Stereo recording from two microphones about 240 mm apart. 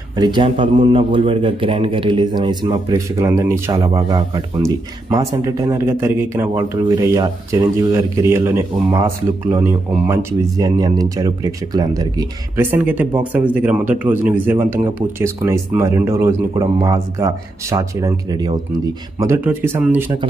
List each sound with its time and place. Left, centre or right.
0.1 s a man's voice: centre